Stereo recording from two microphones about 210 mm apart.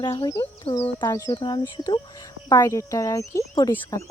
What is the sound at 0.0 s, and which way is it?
Speech, 20° left (ahead or behind).